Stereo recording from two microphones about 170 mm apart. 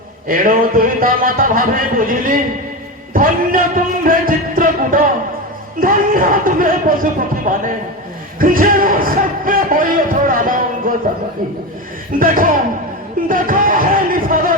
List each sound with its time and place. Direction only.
0.3 s music: 55° right (ahead or behind)
7.5 s a man's voice: 55° right (ahead or behind)
12.2 s music: 55° right (ahead or behind)